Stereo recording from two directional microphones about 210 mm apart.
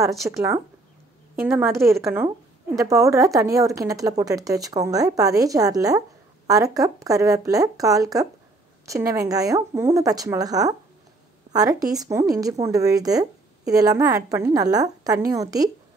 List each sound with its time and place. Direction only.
0.2 s a woman's voice: 10° right (ahead or behind)
1.9 s a woman's voice: 15° right (ahead or behind)